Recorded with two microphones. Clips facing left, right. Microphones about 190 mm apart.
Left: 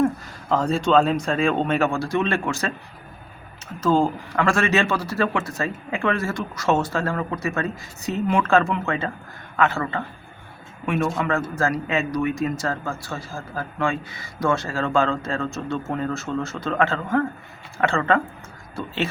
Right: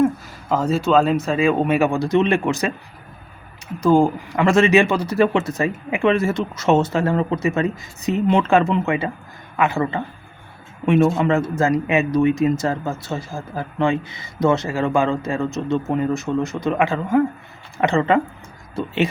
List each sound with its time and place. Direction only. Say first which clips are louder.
0.0 s speech: right 3 dB; 5° right (ahead or behind)
3.8 s speech: right 4 dB; 15° right (ahead or behind)